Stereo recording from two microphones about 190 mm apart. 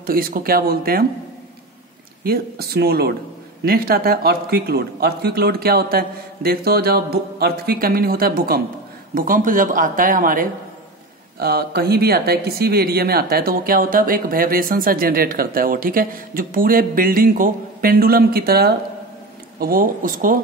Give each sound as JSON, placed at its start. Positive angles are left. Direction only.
{"t": 0.0, "sound": "speech", "side_deg": -50}
{"t": 2.2, "sound": "speech", "side_deg": -55}